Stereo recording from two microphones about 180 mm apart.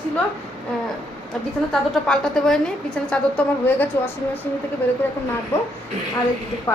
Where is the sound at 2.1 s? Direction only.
Centre (ahead or behind).